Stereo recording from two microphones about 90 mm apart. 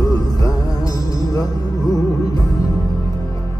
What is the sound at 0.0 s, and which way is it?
Music, 45° left (ahead or behind).